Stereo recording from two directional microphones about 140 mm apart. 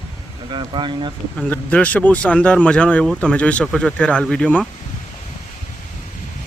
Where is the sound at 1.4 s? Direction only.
10° left (ahead or behind).